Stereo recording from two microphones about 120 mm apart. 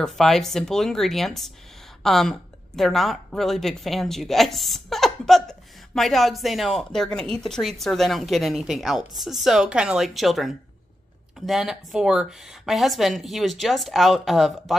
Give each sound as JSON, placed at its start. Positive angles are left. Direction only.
{"t": 0.0, "sound": "a woman's voice", "side_deg": 5}